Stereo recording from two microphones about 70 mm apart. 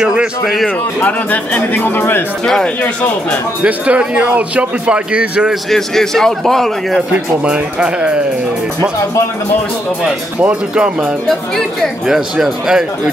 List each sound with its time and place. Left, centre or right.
0.0 s speech: centre
1.0 s speech: left
2.4 s speech: centre
3.6 s a man's voice: centre
5.5 s a man's voice: centre
7.1 s a man's voice: centre
10.4 s a man's voice: centre
12.1 s a man's voice: centre